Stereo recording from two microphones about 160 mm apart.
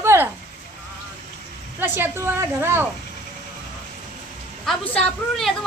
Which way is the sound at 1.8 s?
15° right (ahead or behind).